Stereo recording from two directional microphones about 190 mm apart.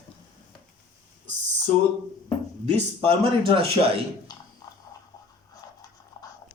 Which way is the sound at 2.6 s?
30° right (ahead or behind).